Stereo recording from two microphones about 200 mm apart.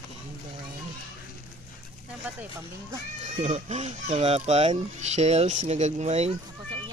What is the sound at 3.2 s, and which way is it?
Speech, 35° right (ahead or behind).